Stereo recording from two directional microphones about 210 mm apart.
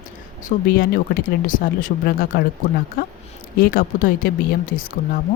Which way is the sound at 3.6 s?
45° left (ahead or behind).